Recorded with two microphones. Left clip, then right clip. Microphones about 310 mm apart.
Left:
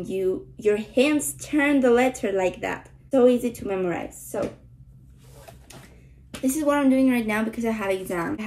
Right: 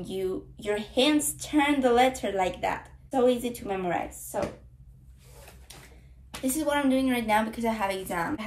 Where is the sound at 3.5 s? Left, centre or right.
Centre.